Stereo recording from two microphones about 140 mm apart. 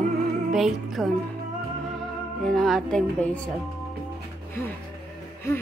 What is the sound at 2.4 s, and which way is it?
Speech, centre (ahead or behind).